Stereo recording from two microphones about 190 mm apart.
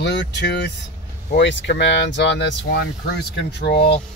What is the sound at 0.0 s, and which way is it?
Speech, 65° left (ahead or behind).